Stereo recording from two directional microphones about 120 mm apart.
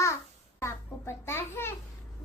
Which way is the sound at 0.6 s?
20° left (ahead or behind).